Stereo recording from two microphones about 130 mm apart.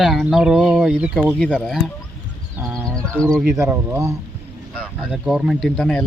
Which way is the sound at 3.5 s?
20° right (ahead or behind).